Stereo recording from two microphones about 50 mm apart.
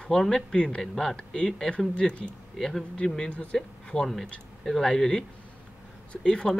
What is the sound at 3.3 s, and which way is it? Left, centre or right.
Speech, left.